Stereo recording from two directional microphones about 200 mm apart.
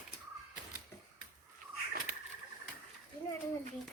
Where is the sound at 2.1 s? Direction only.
45° right (ahead or behind).